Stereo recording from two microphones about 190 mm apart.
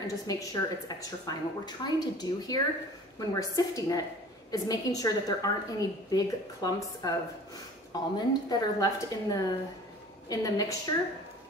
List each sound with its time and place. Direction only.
0.0 s a woman's voice: 20° left (ahead or behind)